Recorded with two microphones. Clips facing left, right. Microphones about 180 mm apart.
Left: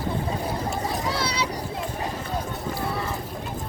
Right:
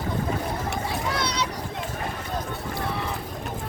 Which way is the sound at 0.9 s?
5° left (ahead or behind).